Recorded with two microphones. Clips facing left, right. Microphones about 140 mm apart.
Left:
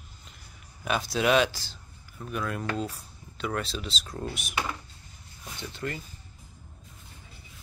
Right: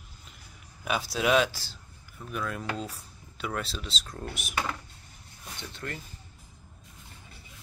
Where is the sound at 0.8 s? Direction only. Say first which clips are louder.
Left 2 dB; 5° right (ahead or behind).